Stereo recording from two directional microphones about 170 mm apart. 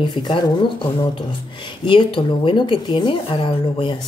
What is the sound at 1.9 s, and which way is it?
Speech, 30° left (ahead or behind).